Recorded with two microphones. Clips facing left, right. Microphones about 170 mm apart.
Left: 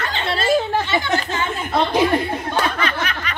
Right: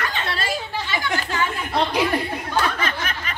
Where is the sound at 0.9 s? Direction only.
25° left (ahead or behind).